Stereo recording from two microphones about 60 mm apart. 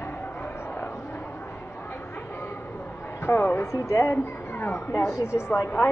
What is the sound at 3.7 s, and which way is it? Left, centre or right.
A woman's voice, left.